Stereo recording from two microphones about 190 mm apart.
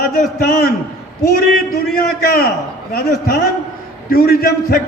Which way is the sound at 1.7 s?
50° left (ahead or behind).